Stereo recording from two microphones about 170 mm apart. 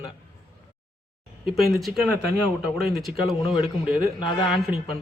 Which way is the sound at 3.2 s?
35° left (ahead or behind).